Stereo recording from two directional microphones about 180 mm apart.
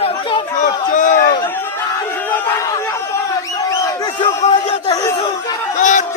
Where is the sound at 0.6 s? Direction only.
45° left (ahead or behind).